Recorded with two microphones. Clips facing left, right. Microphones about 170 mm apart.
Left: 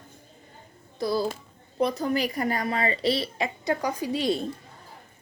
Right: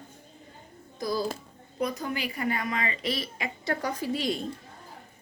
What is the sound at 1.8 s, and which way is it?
Speech, 35° left (ahead or behind).